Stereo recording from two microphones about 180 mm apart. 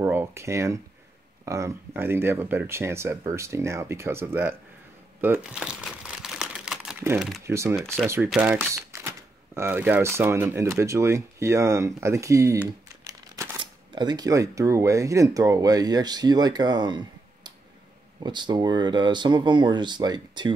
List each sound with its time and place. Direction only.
0.0 s speech: 15° right (ahead or behind)
5.2 s crumpling: 10° right (ahead or behind)
7.4 s speech: 15° right (ahead or behind)
7.8 s speech: 5° left (ahead or behind)
8.3 s speech: 10° right (ahead or behind)